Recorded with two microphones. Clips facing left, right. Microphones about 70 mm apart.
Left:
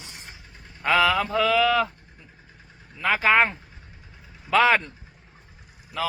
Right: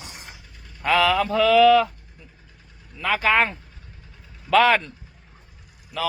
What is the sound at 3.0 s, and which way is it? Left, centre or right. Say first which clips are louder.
Speech: even; left.